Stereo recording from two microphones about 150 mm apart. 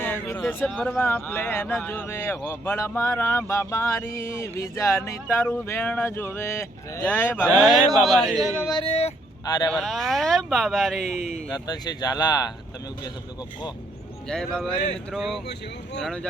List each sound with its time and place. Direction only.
0.0 s a sound: 15° left (ahead or behind)
0.6 s speech: 5° left (ahead or behind)
7.6 s speech: centre (ahead or behind)
8.8 s speech: 40° left (ahead or behind)
9.6 s speech: 5° left (ahead or behind)
11.2 s speech: 50° left (ahead or behind)
11.5 s speech: 25° left (ahead or behind)
14.3 s speech: 5° left (ahead or behind)